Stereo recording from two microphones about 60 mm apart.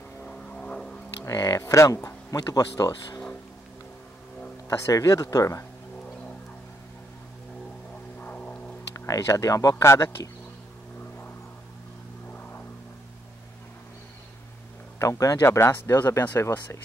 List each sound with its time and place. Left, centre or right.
0.2 s vehicle: centre
1.2 s speech: left
2.0 s speech: left
4.6 s speech: left
8.2 s a sound: left
8.9 s speech: left
9.8 s speech: left
12.3 s vehicle: left
15.0 s speech: left
15.4 s speech: left